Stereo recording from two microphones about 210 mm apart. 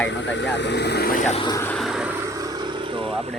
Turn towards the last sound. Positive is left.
turn(degrees=-25)  # may be behind; listen again after turning